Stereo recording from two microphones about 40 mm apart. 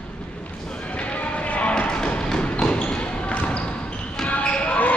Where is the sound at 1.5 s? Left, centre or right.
Left.